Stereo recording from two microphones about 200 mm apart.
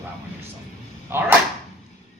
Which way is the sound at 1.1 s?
10° right (ahead or behind).